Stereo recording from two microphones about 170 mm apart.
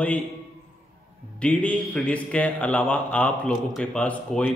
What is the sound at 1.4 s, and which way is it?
Speech, 10° left (ahead or behind).